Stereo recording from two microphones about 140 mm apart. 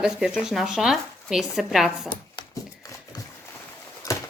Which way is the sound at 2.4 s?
25° left (ahead or behind).